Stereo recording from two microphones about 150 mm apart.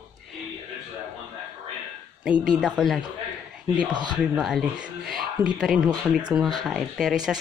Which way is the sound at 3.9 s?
30° right (ahead or behind).